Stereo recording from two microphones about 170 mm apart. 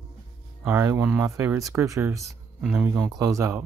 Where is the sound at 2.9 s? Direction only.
20° right (ahead or behind).